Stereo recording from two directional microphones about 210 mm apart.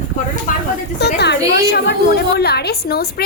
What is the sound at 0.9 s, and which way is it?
A woman's voice, 50° left (ahead or behind).